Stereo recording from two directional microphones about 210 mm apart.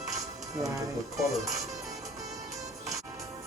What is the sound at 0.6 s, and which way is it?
Speech, 15° right (ahead or behind).